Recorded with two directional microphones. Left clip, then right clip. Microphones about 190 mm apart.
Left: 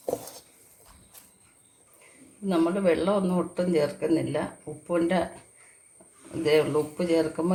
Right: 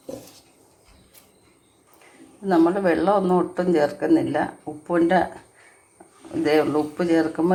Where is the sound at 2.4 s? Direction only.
15° right (ahead or behind).